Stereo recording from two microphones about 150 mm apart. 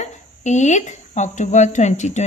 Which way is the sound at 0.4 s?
50° left (ahead or behind).